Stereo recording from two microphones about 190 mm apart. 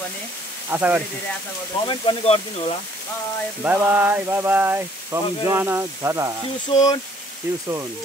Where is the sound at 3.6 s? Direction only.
10° right (ahead or behind).